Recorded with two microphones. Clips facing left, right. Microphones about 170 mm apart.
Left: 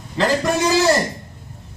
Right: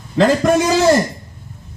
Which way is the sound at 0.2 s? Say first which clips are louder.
Right 5 dB; 50° right (ahead or behind).